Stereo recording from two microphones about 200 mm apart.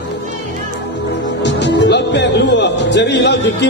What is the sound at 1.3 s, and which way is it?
Speech, 60° left (ahead or behind).